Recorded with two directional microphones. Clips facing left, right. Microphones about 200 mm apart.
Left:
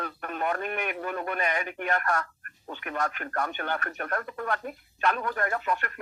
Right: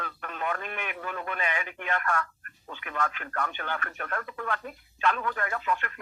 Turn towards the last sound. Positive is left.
turn(degrees=40)  # may be behind; listen again after turning